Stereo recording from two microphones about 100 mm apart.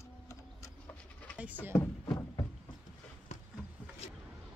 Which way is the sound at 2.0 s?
40° left (ahead or behind).